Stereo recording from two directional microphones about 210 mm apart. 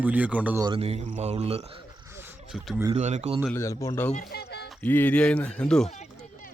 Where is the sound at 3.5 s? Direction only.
15° left (ahead or behind).